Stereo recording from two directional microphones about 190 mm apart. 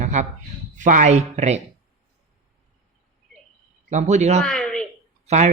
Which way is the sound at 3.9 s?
40° right (ahead or behind).